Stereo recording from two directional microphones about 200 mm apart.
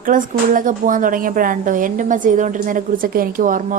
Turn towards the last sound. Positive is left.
turn(degrees=-40)  # may be behind; listen again after turning